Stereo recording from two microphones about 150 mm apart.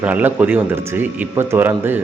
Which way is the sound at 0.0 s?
10° right (ahead or behind).